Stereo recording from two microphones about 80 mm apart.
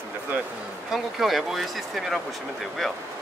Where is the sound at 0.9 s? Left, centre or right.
Centre.